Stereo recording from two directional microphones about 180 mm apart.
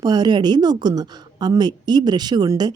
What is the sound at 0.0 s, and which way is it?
A woman's voice, 20° right (ahead or behind).